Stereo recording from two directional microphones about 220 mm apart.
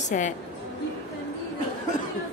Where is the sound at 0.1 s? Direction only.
35° left (ahead or behind).